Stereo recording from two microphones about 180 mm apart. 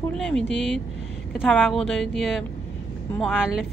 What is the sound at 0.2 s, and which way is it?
Speech, 5° left (ahead or behind).